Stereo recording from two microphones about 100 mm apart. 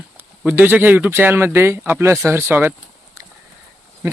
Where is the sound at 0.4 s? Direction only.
20° right (ahead or behind).